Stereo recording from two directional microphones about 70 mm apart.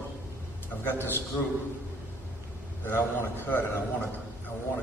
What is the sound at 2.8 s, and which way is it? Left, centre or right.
Speech, left.